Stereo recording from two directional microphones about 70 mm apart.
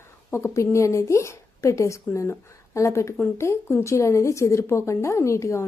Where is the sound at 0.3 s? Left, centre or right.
Left.